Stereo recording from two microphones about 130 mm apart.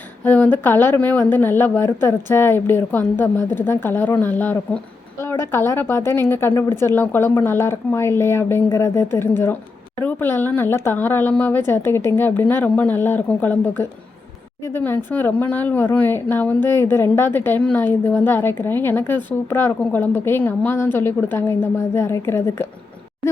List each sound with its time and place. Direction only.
0.3 s a woman's voice: 15° left (ahead or behind)